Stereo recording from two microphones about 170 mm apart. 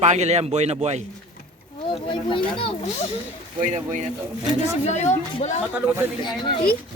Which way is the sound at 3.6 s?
45° right (ahead or behind).